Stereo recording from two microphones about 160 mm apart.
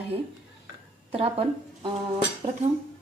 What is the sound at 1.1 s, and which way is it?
A woman's voice, 40° right (ahead or behind).